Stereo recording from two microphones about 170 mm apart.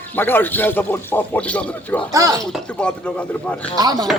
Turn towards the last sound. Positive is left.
turn(degrees=-25)  # may be behind; listen again after turning